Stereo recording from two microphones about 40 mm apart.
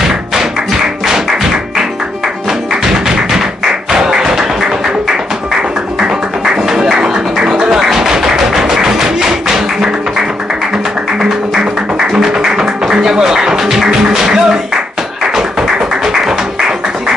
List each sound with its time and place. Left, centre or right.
0.1 s music: centre
3.1 s music: centre
6.0 s music: centre
11.1 s music: centre